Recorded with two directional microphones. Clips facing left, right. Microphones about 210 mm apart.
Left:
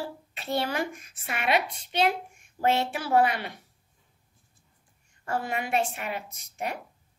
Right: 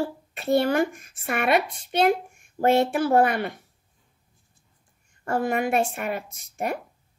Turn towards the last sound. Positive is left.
turn(degrees=-50)  # may be behind; listen again after turning